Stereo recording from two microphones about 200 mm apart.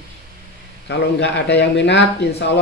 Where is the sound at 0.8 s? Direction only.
60° left (ahead or behind).